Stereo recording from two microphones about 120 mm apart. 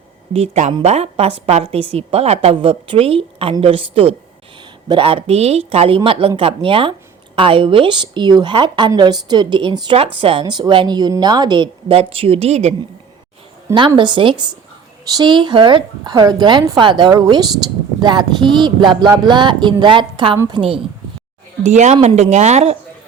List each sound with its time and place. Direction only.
0.3 s a woman's voice: 70° right (ahead or behind); by 10.4 s 50° right (ahead or behind)
10.4 s a woman's voice: 40° right (ahead or behind); by 12.7 s 65° right (ahead or behind)
13.7 s a woman's voice: 40° right (ahead or behind)
21.6 s speech: 75° right (ahead or behind)